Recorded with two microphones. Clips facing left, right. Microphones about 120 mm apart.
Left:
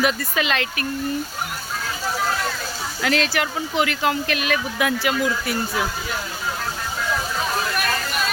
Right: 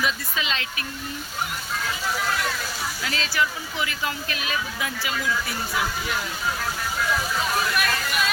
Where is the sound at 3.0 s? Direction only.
70° left (ahead or behind).